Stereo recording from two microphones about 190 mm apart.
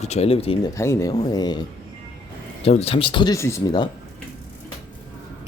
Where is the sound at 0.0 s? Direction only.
35° left (ahead or behind).